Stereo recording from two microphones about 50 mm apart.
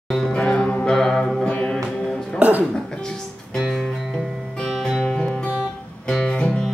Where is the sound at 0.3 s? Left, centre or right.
Centre.